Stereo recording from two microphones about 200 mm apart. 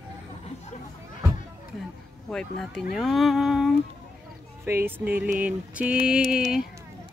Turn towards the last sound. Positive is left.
turn(degrees=-5)  # may be behind; listen again after turning